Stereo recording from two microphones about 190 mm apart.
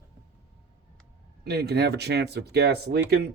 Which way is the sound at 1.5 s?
60° right (ahead or behind).